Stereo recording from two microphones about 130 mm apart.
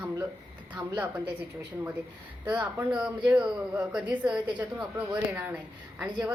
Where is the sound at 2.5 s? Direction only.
15° right (ahead or behind).